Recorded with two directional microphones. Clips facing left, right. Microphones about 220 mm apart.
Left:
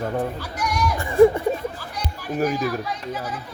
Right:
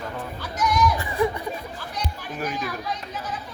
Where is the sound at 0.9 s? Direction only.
50° left (ahead or behind).